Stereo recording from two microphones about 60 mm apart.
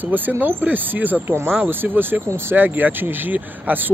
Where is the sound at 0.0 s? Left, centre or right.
Right.